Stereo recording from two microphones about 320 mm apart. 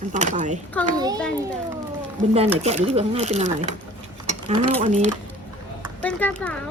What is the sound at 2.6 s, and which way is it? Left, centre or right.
A woman's voice, centre.